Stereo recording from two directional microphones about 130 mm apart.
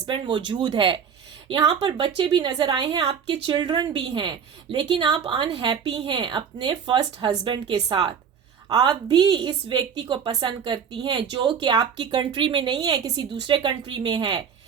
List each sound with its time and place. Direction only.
0.0 s a woman's voice: 35° right (ahead or behind)